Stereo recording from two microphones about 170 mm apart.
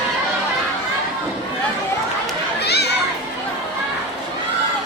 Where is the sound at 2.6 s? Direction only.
75° left (ahead or behind).